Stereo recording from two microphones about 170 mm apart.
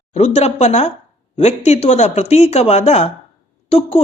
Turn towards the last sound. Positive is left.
turn(degrees=35)  # may be behind; listen again after turning